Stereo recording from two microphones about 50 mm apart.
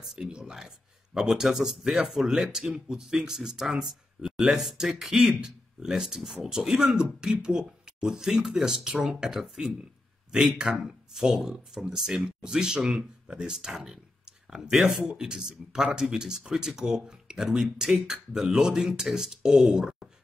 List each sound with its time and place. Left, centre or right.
0.0 s speech: centre